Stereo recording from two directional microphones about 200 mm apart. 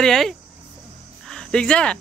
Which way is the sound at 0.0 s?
Centre (ahead or behind).